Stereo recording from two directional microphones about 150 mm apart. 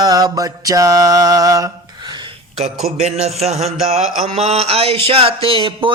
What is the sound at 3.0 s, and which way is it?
Speech, 45° right (ahead or behind).